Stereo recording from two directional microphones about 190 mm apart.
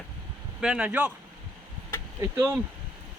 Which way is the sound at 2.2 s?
15° right (ahead or behind).